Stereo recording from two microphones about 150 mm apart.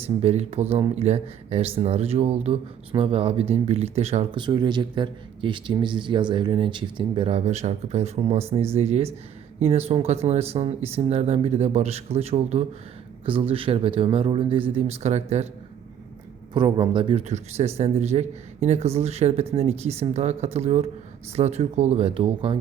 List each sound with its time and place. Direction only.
0.2 s speech: 45° right (ahead or behind)
4.4 s speech: 30° right (ahead or behind); by 15.4 s 45° right (ahead or behind)
16.6 s speech: 30° right (ahead or behind)
17.2 s speech: 50° right (ahead or behind)